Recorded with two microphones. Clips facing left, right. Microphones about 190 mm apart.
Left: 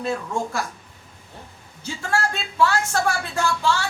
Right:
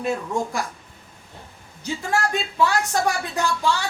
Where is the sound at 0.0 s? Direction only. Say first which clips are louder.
Right 1 dB; 15° right (ahead or behind).